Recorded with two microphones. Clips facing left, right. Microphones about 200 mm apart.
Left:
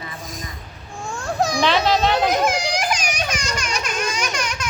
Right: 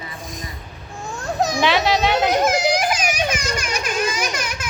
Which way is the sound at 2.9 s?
5° right (ahead or behind).